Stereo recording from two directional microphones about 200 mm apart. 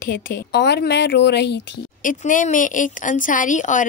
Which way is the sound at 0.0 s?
45° left (ahead or behind).